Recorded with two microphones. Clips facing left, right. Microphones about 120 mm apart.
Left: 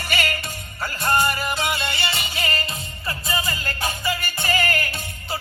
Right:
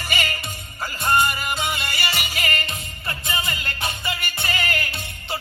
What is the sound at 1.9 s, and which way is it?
Music, 30° left (ahead or behind).